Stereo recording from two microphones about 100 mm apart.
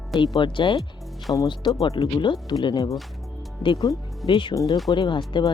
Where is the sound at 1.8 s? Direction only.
65° left (ahead or behind); by 2.9 s 45° left (ahead or behind).